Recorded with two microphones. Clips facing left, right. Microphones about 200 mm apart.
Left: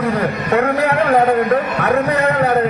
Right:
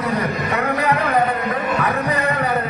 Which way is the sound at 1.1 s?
50° left (ahead or behind).